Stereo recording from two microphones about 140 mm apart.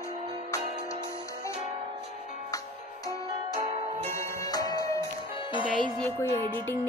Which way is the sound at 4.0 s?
20° left (ahead or behind).